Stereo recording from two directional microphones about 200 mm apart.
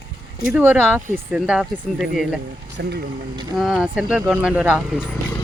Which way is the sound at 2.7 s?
55° right (ahead or behind).